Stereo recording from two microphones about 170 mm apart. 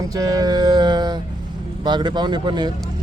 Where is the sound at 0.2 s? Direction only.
20° right (ahead or behind).